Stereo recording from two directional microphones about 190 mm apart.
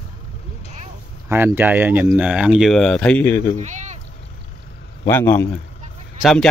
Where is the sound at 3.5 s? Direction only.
40° right (ahead or behind).